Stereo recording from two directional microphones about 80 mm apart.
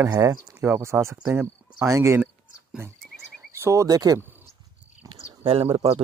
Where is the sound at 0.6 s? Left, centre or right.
Right.